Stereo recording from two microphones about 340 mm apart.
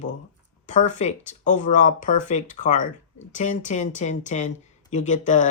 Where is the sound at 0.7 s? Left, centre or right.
Left.